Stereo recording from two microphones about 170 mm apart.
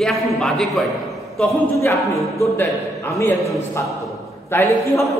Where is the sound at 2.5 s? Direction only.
15° left (ahead or behind).